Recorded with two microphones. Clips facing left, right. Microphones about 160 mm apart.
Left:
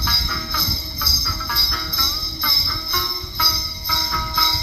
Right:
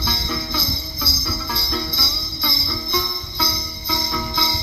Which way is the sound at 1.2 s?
25° right (ahead or behind).